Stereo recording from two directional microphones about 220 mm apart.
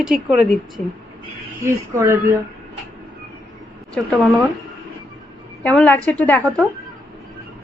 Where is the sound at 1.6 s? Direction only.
10° right (ahead or behind).